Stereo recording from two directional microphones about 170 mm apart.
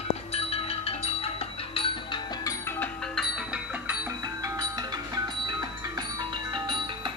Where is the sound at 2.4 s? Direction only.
15° left (ahead or behind).